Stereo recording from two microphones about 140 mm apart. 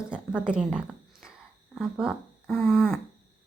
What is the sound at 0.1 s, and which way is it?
Speech, 5° right (ahead or behind).